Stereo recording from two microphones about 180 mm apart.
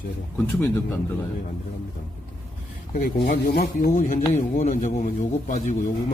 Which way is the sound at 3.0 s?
55° left (ahead or behind).